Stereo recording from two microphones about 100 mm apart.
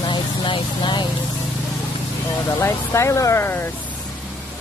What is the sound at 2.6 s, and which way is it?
Speech, 30° left (ahead or behind).